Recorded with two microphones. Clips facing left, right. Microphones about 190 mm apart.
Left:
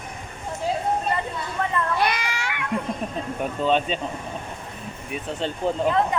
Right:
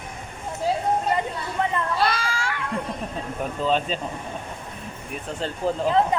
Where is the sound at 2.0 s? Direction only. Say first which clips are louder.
Right 1 dB; 20° left (ahead or behind).